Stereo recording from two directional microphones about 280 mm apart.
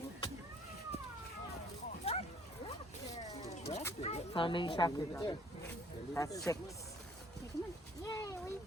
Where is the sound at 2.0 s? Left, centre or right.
Left.